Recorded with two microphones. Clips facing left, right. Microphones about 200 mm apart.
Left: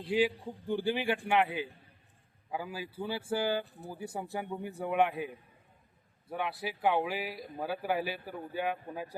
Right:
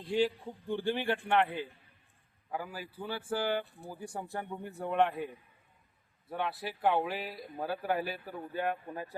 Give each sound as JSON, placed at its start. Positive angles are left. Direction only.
{"t": 0.0, "sound": "speech", "side_deg": 5}
{"t": 2.5, "sound": "speech", "side_deg": 10}
{"t": 3.9, "sound": "speech", "side_deg": 5}